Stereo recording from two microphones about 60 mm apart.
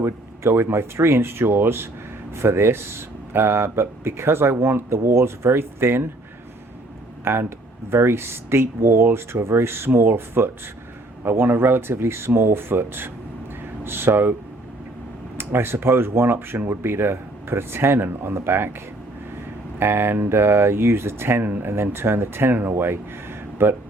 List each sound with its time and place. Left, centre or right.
0.0 s speech: right
7.9 s speech: right
15.4 s speech: right
19.8 s speech: right